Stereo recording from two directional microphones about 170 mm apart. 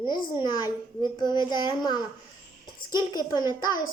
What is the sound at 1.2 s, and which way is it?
A woman's voice, 25° left (ahead or behind).